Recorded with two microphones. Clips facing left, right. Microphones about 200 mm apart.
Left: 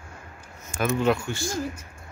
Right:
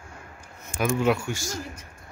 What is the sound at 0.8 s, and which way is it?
Speech, 10° right (ahead or behind).